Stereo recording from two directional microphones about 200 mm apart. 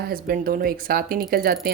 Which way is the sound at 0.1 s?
45° right (ahead or behind).